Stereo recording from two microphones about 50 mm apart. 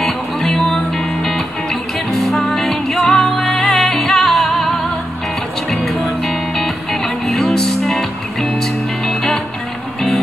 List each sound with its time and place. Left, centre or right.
0.0 s music: centre